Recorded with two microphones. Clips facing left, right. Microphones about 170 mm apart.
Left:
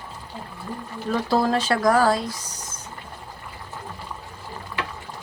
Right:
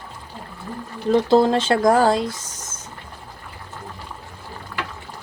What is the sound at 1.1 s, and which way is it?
Speech, 25° right (ahead or behind).